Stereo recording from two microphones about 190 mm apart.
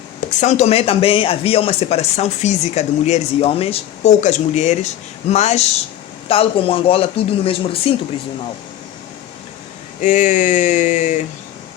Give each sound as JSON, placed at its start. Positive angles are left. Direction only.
{"t": 0.3, "sound": "speech", "side_deg": 40}
{"t": 10.0, "sound": "speech", "side_deg": 40}